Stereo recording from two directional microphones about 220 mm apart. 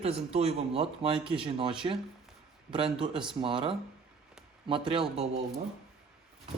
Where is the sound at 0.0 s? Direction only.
25° right (ahead or behind).